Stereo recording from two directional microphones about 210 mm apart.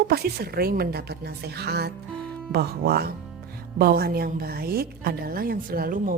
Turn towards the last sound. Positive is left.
turn(degrees=-45)  # may be behind; listen again after turning